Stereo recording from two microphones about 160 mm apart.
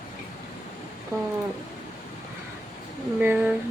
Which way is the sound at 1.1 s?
20° right (ahead or behind).